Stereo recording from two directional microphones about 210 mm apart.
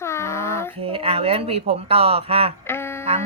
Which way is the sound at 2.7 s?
10° left (ahead or behind).